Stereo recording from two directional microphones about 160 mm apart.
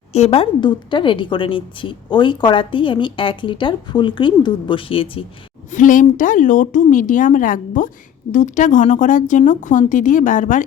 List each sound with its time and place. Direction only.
0.1 s a woman's voice: 40° left (ahead or behind)
5.7 s speech: 55° left (ahead or behind)